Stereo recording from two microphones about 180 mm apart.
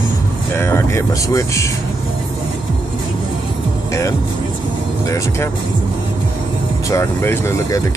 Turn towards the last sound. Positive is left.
turn(degrees=15)  # may be behind; listen again after turning